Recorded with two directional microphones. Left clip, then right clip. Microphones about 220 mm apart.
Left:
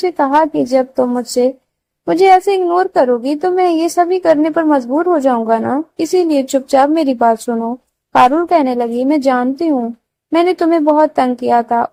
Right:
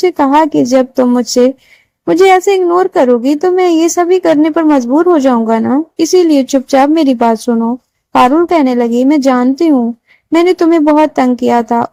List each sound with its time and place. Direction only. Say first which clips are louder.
0.0 s a woman's voice: right 3 dB; 45° right (ahead or behind)